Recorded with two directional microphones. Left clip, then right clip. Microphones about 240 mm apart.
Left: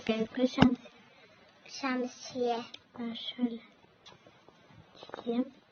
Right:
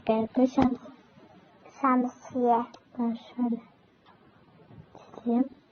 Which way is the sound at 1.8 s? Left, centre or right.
Left.